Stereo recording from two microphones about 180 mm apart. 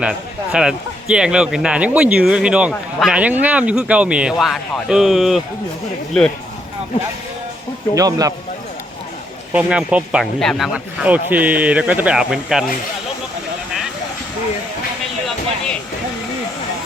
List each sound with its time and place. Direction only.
0.0 s speech: 5° right (ahead or behind)
7.9 s speech: 20° right (ahead or behind)
9.5 s speech: 5° right (ahead or behind)